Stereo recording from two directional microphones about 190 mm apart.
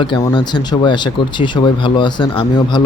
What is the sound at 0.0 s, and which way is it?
Speech, 25° left (ahead or behind).